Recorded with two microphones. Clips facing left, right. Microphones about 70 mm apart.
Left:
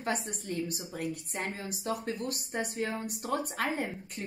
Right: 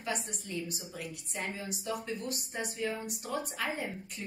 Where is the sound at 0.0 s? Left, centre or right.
Left.